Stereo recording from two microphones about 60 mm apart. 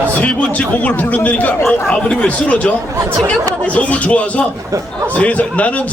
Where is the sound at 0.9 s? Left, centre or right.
Left.